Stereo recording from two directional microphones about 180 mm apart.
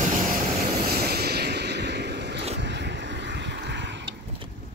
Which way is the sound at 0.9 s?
60° right (ahead or behind).